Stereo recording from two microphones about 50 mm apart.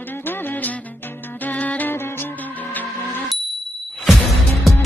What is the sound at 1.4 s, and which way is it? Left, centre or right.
Music, left.